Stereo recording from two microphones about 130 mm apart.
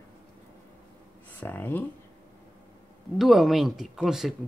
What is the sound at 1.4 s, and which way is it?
Speech, 15° left (ahead or behind).